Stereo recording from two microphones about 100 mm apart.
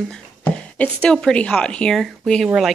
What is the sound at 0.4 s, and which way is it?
A woman's voice, 10° left (ahead or behind).